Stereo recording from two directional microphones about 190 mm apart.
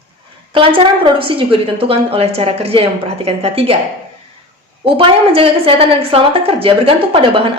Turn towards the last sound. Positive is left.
turn(degrees=-30)  # may be behind; listen again after turning